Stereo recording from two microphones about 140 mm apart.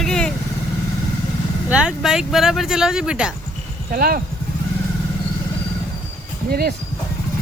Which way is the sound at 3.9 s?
90° right.